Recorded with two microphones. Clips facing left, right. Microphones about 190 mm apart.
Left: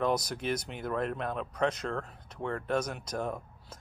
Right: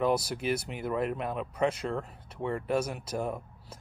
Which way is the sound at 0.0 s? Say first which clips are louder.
Right 2 dB; 5° right (ahead or behind).